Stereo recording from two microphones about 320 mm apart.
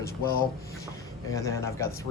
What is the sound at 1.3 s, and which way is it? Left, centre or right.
Speech, centre.